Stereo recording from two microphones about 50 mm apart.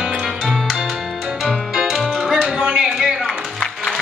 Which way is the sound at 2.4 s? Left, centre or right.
Right.